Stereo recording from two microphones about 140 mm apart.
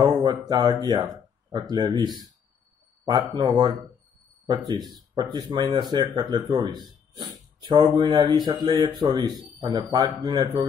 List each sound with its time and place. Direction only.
0.0 s speech: 30° right (ahead or behind)